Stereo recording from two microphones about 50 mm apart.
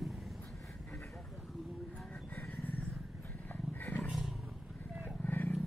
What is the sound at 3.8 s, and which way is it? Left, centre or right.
Roaring cats, left.